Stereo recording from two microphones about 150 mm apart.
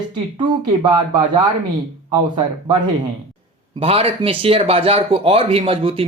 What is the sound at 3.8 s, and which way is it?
Speech, 40° right (ahead or behind).